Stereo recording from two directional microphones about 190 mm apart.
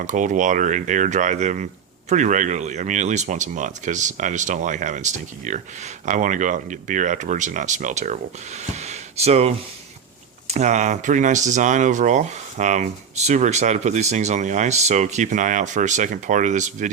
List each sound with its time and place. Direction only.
0.0 s speech: 40° right (ahead or behind)
10.5 s speech: 40° right (ahead or behind)